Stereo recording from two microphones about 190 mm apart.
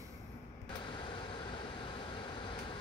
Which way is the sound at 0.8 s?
25° left (ahead or behind).